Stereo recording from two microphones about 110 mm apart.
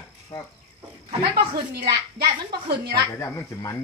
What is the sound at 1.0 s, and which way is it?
Speech, 60° right (ahead or behind).